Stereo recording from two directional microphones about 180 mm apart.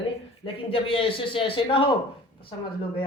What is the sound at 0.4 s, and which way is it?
Speech, 30° left (ahead or behind).